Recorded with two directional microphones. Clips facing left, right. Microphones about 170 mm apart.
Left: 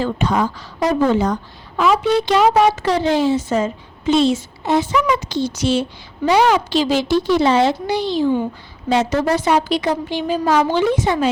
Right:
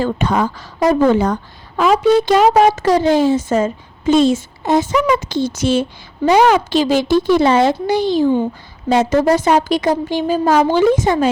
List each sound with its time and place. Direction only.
0.0 s a woman's voice: 55° right (ahead or behind)